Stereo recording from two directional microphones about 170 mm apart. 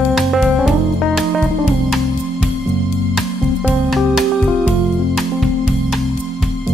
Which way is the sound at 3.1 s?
Centre (ahead or behind).